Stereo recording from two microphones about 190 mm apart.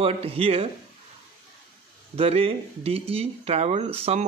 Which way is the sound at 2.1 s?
30° right (ahead or behind).